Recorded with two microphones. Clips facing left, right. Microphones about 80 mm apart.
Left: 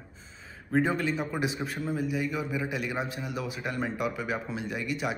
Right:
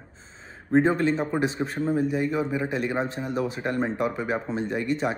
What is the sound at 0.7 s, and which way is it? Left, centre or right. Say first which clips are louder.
A man's voice: right 6 dB; right.